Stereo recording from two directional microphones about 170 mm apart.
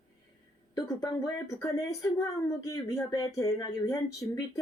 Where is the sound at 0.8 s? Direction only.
20° left (ahead or behind).